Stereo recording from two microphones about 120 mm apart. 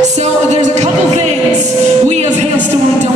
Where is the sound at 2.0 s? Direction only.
75° right (ahead or behind).